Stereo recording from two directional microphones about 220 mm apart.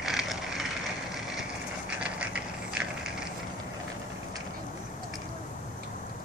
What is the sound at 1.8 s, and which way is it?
Mechanisms, 5° right (ahead or behind).